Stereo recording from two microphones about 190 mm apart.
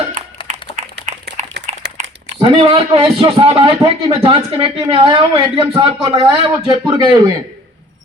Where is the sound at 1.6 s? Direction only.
60° right (ahead or behind).